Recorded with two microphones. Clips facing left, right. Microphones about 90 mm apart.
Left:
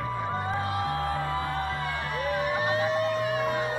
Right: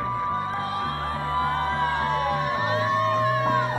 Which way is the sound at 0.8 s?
40° right (ahead or behind).